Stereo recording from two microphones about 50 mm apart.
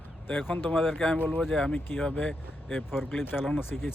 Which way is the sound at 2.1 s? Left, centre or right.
Left.